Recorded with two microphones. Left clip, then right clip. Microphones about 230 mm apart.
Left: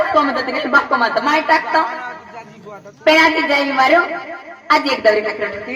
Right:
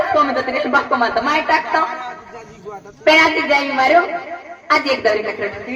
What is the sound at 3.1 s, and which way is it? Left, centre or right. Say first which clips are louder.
A woman's voice: even; left.